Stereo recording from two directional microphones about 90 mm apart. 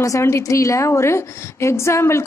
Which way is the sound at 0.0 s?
35° left (ahead or behind).